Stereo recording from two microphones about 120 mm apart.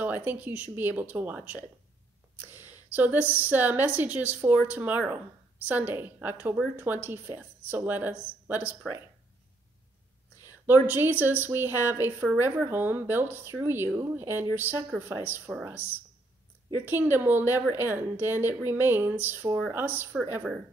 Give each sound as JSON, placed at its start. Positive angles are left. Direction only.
{"t": 0.0, "sound": "a woman's voice", "side_deg": -15}
{"t": 10.7, "sound": "a woman's voice", "side_deg": -15}